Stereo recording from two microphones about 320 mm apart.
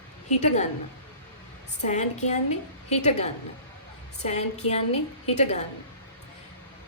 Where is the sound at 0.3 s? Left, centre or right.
Left.